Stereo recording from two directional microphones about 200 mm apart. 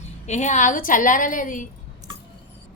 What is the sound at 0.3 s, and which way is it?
A woman's voice, 35° left (ahead or behind).